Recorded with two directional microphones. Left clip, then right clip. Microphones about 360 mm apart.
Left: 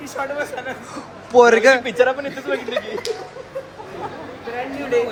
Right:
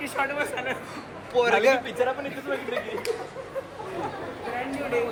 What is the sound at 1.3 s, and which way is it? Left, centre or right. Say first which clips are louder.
A man's voice: left 9 dB; centre.